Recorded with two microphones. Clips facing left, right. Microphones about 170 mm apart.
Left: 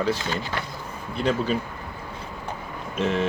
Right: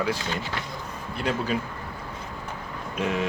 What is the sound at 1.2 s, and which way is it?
Speech, 5° right (ahead or behind).